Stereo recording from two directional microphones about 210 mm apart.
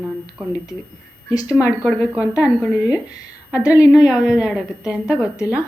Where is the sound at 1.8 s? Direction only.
5° right (ahead or behind).